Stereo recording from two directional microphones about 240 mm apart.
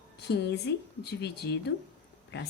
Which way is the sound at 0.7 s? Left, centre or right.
Left.